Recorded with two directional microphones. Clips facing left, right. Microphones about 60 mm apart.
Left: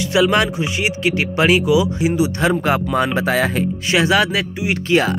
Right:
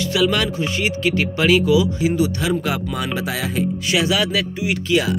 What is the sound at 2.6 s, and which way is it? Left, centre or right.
Speech, left.